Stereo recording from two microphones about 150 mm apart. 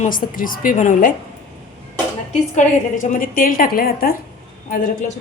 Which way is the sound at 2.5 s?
60° left (ahead or behind).